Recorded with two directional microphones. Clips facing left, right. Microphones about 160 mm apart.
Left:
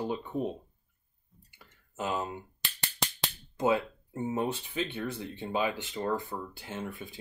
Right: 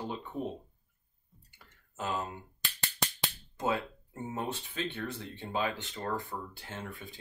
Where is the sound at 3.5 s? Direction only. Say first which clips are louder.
Left 5 dB; 15° left (ahead or behind).